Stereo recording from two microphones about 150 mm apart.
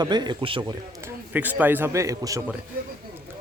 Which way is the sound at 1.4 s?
10° right (ahead or behind).